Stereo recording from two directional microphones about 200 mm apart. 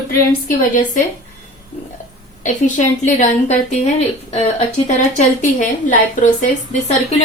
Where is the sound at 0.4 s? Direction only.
40° left (ahead or behind).